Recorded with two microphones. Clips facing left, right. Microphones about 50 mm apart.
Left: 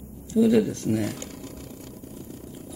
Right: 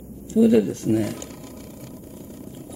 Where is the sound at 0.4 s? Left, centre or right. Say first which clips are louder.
Right 3 dB; centre.